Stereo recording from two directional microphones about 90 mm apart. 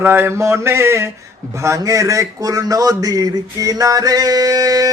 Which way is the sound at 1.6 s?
35° right (ahead or behind).